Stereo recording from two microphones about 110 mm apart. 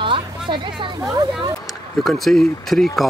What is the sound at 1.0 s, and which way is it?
Speech, 35° right (ahead or behind).